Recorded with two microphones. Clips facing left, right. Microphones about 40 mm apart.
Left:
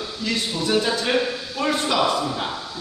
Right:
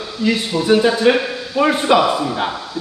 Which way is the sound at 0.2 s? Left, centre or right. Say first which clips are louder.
Right 8 dB; right.